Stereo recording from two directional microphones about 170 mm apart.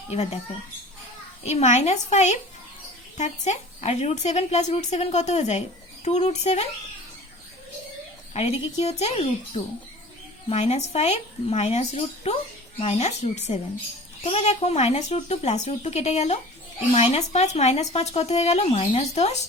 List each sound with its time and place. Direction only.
0.1 s speech: 35° left (ahead or behind)
1.5 s speech: 40° left (ahead or behind)
8.3 s speech: 35° left (ahead or behind)